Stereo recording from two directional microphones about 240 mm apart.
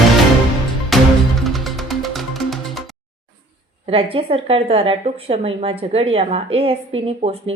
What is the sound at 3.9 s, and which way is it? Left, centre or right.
A woman's voice, right.